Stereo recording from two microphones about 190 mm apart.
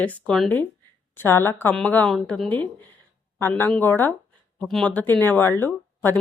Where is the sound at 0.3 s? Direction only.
5° left (ahead or behind).